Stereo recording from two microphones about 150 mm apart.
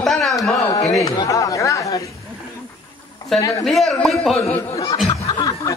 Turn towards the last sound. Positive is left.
turn(degrees=5)  # may be behind; listen again after turning